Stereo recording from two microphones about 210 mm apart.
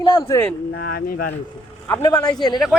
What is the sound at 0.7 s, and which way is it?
Speech, 50° left (ahead or behind).